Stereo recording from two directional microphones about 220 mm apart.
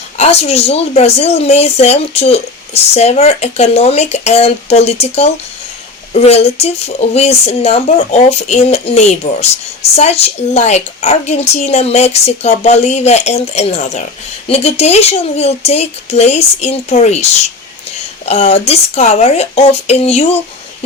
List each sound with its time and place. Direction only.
0.2 s speech: 30° left (ahead or behind)